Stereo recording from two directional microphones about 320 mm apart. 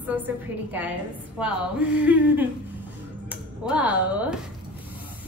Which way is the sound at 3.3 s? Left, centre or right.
Centre.